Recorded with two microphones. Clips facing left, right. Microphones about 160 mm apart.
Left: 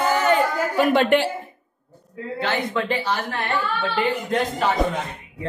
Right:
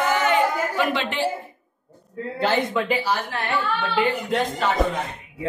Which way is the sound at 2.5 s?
10° right (ahead or behind).